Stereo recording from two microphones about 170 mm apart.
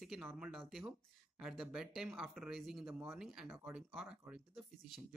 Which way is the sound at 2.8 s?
15° right (ahead or behind).